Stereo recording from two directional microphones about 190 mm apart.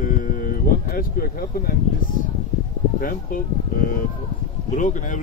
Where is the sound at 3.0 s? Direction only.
50° left (ahead or behind).